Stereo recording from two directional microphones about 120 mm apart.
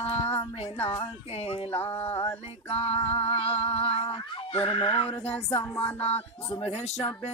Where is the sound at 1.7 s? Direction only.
15° left (ahead or behind).